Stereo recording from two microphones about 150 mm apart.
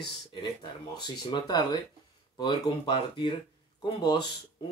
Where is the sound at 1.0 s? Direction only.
30° left (ahead or behind).